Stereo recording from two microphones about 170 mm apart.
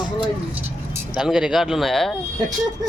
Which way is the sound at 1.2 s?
5° right (ahead or behind).